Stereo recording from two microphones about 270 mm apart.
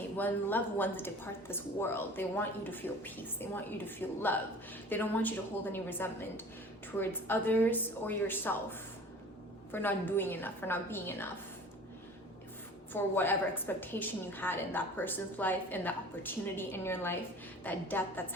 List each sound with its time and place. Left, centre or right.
0.2 s a woman's voice: centre
9.7 s a woman's voice: centre
12.9 s a woman's voice: centre